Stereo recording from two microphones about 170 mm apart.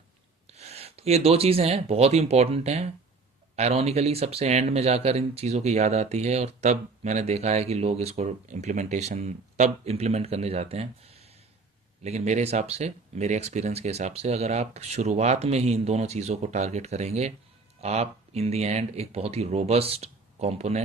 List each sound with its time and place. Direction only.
0.5 s speech: 40° right (ahead or behind)